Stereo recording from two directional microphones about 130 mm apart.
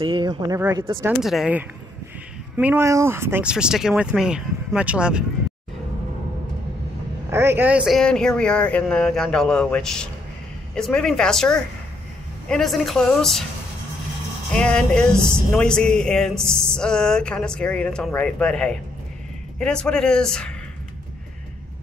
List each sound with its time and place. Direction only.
0.0 s speech: 40° right (ahead or behind)
1.2 s speech: 5° right (ahead or behind)
2.5 s speech: 15° right (ahead or behind)
3.4 s speech: 5° right (ahead or behind)
7.2 s speech: 20° right (ahead or behind)
7.9 s speech: 5° left (ahead or behind)
14.5 s speech: 5° left (ahead or behind)